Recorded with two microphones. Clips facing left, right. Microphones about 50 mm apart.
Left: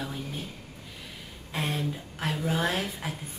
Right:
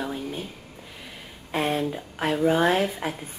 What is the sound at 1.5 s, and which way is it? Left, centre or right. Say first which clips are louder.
Speech: right 6 dB; centre.